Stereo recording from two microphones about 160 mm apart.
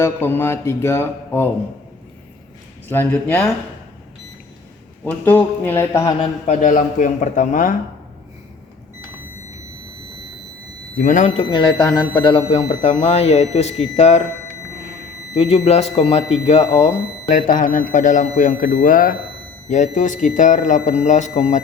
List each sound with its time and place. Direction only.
0.0 s speech: 15° left (ahead or behind)
2.9 s speech: 15° left (ahead or behind)
5.0 s speech: 10° left (ahead or behind)
6.4 s a man's voice: 50° left (ahead or behind)
10.9 s a man's voice: 55° left (ahead or behind)
11.4 s speech: 25° left (ahead or behind); by 14.2 s 45° left (ahead or behind)
15.4 s a man's voice: 40° left (ahead or behind)
17.2 s a man's voice: 55° left (ahead or behind)